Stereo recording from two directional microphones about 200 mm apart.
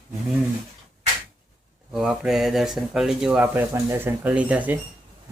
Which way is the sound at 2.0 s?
Centre (ahead or behind).